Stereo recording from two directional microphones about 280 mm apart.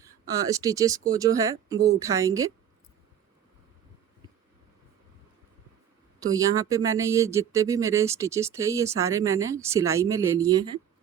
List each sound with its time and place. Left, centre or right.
0.0 s speech: centre
6.1 s speech: centre